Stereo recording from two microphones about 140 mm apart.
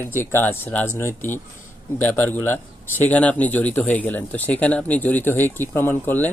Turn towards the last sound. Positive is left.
turn(degrees=15)  # may be behind; listen again after turning